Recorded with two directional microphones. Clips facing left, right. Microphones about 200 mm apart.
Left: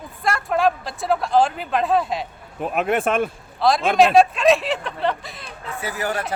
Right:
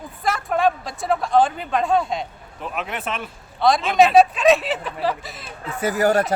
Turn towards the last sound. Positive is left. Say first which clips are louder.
# right 7 dB
turn(degrees=-40)  # may be behind; listen again after turning